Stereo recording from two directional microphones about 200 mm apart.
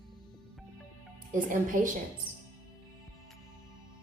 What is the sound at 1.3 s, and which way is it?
Speech, 40° right (ahead or behind).